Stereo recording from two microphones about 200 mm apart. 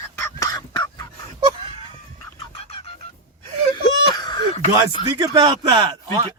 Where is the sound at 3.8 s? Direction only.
20° left (ahead or behind).